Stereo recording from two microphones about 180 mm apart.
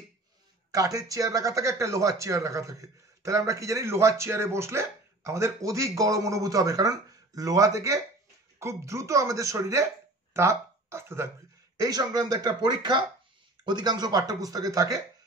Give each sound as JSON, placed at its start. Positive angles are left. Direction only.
{"t": 0.7, "sound": "speech", "side_deg": -20}